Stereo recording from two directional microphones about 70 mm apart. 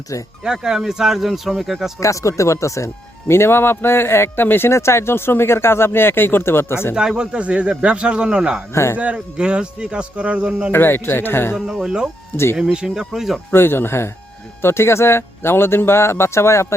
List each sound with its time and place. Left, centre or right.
0.1 s speech: left
0.4 s speech: centre
2.0 s speech: left
6.9 s speech: centre
8.7 s speech: left
9.0 s speech: centre
10.7 s speech: left
11.5 s speech: centre
13.5 s speech: left